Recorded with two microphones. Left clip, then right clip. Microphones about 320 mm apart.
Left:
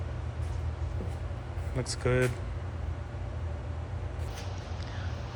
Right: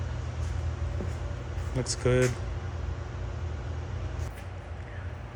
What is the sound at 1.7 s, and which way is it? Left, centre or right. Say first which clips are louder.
Speech: right 3 dB; centre.